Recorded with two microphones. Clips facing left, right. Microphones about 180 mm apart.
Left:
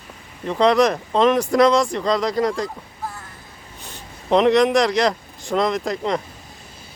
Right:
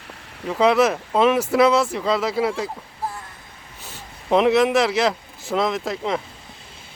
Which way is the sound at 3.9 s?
5° right (ahead or behind).